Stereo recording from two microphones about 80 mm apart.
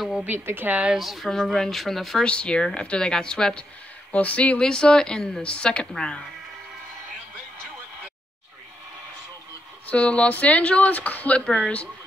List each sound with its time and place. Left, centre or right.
0.2 s a woman's voice: right
0.9 s speech: centre
9.8 s speech: centre